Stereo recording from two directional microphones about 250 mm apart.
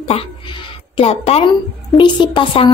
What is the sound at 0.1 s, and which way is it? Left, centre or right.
A woman's voice, left.